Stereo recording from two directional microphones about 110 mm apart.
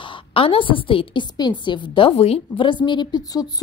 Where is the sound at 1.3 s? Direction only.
40° left (ahead or behind).